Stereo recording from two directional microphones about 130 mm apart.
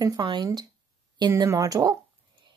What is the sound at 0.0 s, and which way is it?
Speech, 25° right (ahead or behind).